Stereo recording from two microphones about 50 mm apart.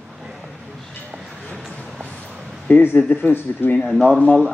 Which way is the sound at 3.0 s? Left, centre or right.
Left.